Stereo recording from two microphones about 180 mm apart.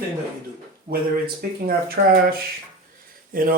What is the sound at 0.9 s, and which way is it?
Speech, 50° right (ahead or behind).